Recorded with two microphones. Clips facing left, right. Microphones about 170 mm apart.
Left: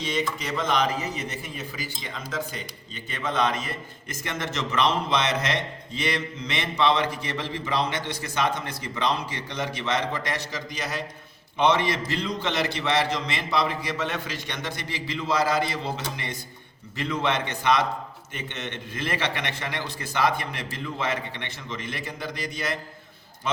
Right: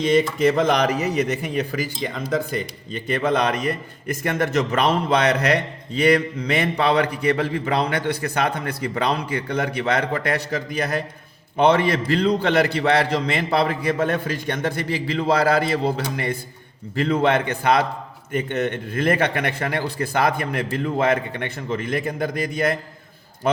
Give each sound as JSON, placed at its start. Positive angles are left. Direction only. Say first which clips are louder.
{"t": 0.0, "sound": "a man's voice", "louder": "right 11 dB", "side_deg": -55}